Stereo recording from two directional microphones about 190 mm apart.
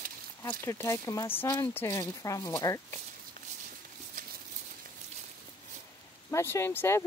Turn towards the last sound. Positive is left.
turn(degrees=15)  # may be behind; listen again after turning